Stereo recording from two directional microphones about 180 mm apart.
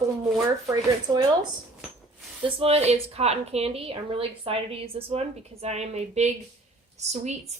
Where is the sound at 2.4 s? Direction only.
35° right (ahead or behind).